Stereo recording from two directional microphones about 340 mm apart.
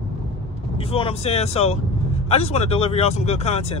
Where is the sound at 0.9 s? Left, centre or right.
Centre.